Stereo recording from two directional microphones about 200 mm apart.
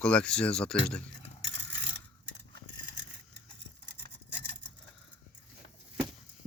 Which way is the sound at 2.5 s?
60° right (ahead or behind).